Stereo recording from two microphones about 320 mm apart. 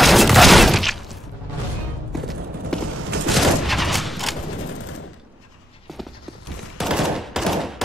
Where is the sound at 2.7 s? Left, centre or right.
Centre.